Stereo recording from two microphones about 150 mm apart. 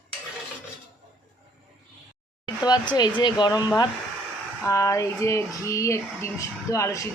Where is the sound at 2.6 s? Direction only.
30° left (ahead or behind).